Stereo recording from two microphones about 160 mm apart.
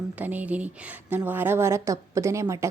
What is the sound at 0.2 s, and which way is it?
A woman's voice, 10° right (ahead or behind).